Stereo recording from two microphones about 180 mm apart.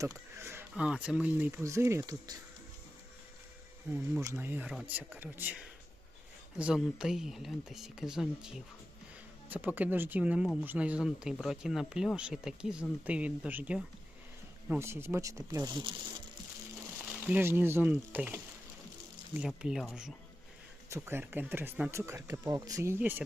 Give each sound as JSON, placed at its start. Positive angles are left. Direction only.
{"t": 0.0, "sound": "speech", "side_deg": -15}
{"t": 4.2, "sound": "speech", "side_deg": -15}
{"t": 17.2, "sound": "speech", "side_deg": -10}